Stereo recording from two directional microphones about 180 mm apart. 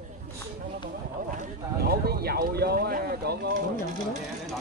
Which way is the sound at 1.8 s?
60° right (ahead or behind).